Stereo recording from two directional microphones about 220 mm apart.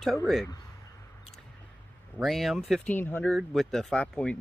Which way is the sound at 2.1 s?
Centre (ahead or behind).